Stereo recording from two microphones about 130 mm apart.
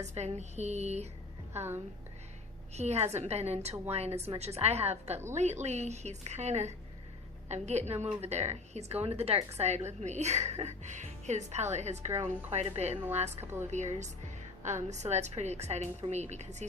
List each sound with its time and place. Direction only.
0.0 s a woman's voice: 60° right (ahead or behind)
1.5 s a woman's voice: 15° right (ahead or behind)
2.7 s a woman's voice: 55° right (ahead or behind)
13.4 s a woman's voice: 20° right (ahead or behind)
13.7 s a woman's voice: 65° right (ahead or behind)